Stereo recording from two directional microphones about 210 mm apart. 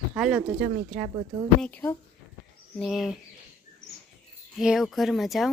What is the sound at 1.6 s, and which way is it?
A woman's voice, 10° left (ahead or behind).